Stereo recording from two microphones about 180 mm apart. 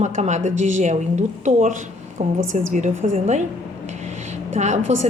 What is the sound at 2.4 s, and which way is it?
Speech, 90° right.